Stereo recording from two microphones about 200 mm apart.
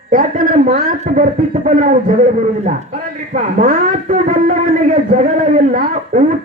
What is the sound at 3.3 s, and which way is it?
Speech, 40° right (ahead or behind).